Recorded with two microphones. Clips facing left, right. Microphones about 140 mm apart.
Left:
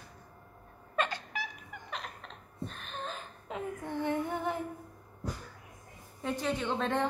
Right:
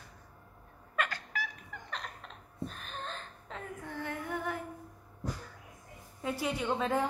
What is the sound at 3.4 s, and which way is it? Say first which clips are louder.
Child singing: left 7 dB; 20° left (ahead or behind).